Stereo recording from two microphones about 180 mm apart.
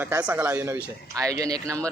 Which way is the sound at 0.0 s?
10° right (ahead or behind).